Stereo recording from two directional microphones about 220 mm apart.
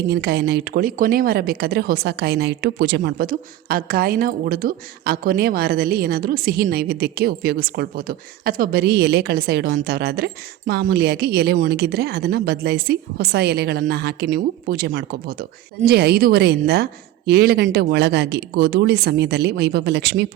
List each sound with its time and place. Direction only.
0.1 s a woman's voice: 45° right (ahead or behind)